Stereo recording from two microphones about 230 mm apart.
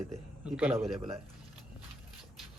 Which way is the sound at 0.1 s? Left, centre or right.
Centre.